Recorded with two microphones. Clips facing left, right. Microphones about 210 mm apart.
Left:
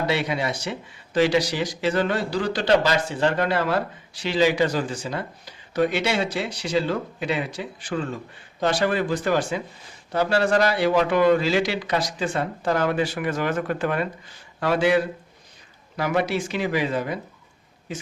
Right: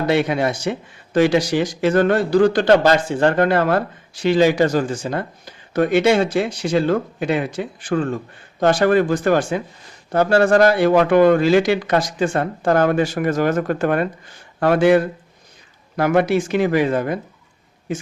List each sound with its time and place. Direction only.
0.1 s speech: 50° right (ahead or behind)